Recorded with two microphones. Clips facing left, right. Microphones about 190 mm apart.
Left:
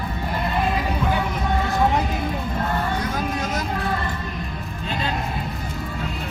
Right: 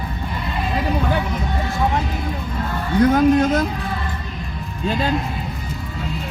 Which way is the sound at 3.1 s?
55° right (ahead or behind).